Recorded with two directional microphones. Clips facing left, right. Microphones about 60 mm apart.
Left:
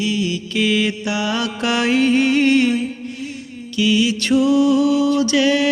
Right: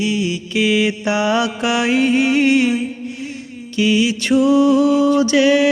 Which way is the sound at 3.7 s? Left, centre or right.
Right.